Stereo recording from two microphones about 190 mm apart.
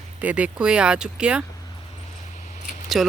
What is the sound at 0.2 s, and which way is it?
Speech, 5° right (ahead or behind).